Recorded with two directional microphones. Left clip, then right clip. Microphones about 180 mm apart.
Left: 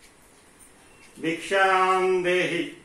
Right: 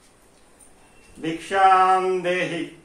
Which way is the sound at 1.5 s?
20° right (ahead or behind).